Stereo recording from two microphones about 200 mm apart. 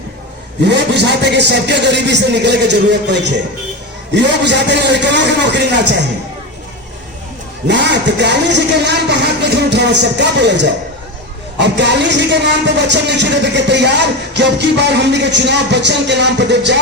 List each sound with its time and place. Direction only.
0.6 s speech: 60° right (ahead or behind)
7.7 s speech: 60° right (ahead or behind)